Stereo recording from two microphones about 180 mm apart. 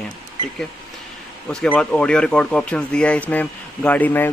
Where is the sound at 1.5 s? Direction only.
5° left (ahead or behind).